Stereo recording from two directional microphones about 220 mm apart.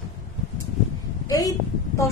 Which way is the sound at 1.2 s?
15° left (ahead or behind).